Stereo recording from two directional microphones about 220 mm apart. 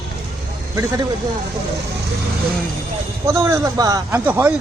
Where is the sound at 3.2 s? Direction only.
15° right (ahead or behind).